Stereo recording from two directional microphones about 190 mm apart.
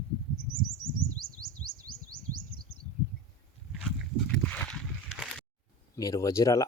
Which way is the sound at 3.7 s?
Centre (ahead or behind).